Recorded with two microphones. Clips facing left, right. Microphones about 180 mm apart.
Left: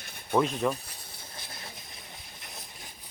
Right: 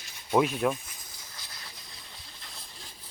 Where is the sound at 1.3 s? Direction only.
25° left (ahead or behind).